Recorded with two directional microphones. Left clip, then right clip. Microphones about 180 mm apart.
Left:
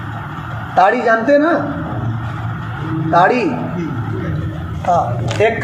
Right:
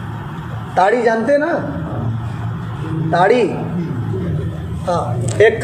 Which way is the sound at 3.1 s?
35° right (ahead or behind).